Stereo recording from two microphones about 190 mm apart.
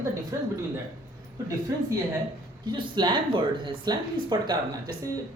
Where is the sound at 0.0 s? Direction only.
15° right (ahead or behind).